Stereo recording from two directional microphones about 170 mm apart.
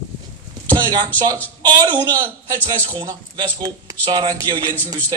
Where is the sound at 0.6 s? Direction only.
10° left (ahead or behind).